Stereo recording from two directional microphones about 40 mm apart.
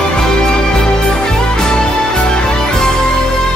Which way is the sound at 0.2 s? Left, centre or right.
Centre.